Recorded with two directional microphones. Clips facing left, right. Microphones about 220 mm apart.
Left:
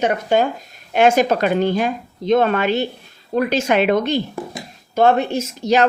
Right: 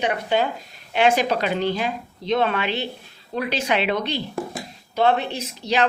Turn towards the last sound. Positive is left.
turn(degrees=45)  # may be behind; listen again after turning